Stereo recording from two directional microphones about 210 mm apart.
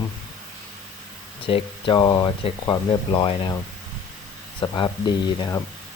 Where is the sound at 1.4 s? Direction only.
25° left (ahead or behind).